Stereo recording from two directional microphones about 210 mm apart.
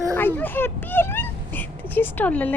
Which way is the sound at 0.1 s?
10° left (ahead or behind).